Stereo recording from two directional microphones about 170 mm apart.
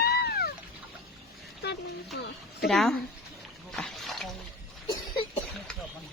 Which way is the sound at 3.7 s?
5° left (ahead or behind).